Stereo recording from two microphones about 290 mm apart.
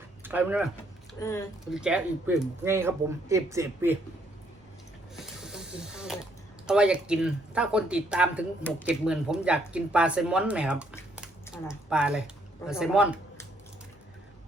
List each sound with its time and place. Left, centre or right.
0.2 s speech: centre
1.2 s speech: centre
1.7 s speech: centre
5.1 s snake: centre
6.7 s speech: centre